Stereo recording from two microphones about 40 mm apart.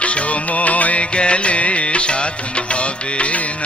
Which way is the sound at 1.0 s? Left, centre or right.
Left.